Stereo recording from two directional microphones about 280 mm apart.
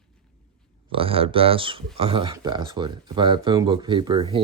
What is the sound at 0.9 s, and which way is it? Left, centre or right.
Speech, centre.